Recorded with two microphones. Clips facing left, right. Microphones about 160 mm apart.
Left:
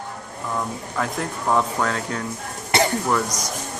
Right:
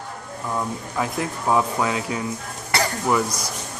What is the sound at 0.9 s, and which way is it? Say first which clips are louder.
Speech: even; 5° right (ahead or behind).